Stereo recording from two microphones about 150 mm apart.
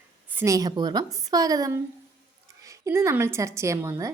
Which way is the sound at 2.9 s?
15° right (ahead or behind).